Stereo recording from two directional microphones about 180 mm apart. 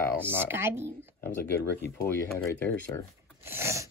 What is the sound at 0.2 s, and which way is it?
Speech, 10° right (ahead or behind).